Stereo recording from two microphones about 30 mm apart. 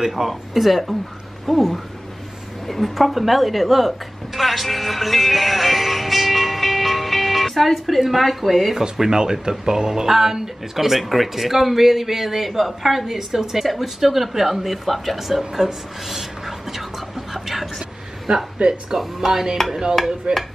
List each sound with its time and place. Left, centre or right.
0.0 s speech: centre
0.3 s speech: centre
2.9 s speech: centre
9.1 s speech: right; by 13.0 s centre
13.0 s speech: centre
18.6 s speech: right
18.9 s speech: centre
19.7 s a sound: right
20.3 s speech: right